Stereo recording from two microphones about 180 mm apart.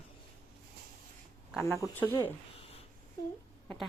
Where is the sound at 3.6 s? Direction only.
5° left (ahead or behind).